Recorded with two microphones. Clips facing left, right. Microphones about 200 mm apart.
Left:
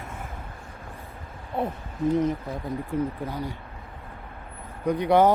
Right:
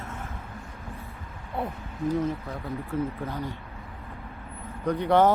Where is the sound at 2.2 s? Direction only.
15° left (ahead or behind).